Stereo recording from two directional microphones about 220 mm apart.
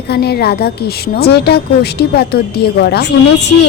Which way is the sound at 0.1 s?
45° left (ahead or behind).